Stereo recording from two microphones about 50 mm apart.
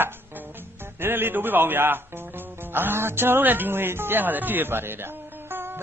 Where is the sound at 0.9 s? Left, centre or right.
Right.